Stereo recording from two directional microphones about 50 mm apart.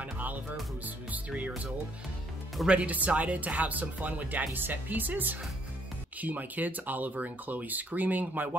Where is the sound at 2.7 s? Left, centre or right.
Right.